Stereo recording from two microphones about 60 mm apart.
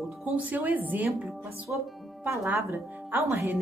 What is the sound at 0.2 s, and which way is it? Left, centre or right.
A woman's voice, right.